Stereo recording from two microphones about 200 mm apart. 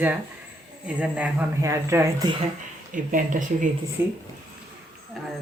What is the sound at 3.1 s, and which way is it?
Speech, 40° right (ahead or behind).